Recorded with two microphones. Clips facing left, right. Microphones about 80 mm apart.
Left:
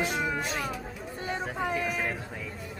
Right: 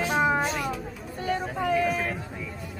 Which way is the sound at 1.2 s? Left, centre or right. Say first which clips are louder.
Right 4 dB; centre.